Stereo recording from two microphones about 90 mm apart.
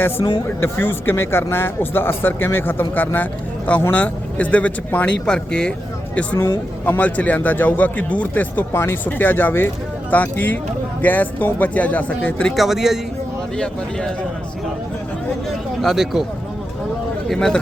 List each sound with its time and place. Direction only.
0.2 s speech: 55° left (ahead or behind)
0.6 s a man's voice: 25° left (ahead or behind)
6.3 s speech: 45° left (ahead or behind)
6.8 s a man's voice: 20° left (ahead or behind)
12.5 s speech: 5° right (ahead or behind)
15.8 s speech: centre (ahead or behind)
17.2 s speech: 5° left (ahead or behind)